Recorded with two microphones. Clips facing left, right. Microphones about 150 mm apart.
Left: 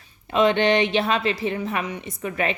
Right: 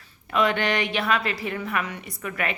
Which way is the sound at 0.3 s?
25° left (ahead or behind).